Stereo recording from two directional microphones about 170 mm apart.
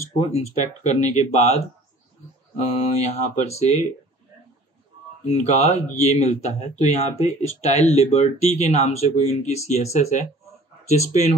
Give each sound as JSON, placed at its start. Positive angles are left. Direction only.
{"t": 0.3, "sound": "speech", "side_deg": 40}
{"t": 3.0, "sound": "speech", "side_deg": 40}
{"t": 5.2, "sound": "speech", "side_deg": 40}